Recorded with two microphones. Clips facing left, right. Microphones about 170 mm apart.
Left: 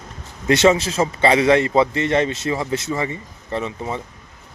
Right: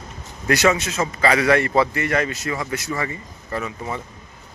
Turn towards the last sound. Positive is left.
turn(degrees=25)  # may be behind; listen again after turning